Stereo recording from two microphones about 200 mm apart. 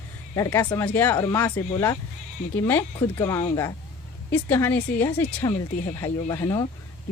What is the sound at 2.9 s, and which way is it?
Speech, 20° left (ahead or behind).